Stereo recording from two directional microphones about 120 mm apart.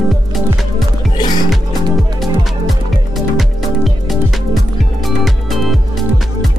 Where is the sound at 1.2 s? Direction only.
35° left (ahead or behind).